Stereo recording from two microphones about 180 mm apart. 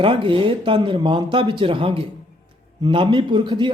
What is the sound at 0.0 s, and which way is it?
Speech, 30° right (ahead or behind).